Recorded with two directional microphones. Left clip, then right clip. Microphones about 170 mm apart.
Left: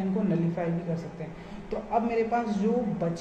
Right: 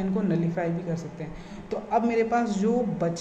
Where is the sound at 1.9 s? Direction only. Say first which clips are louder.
Right 3 dB; 45° right (ahead or behind).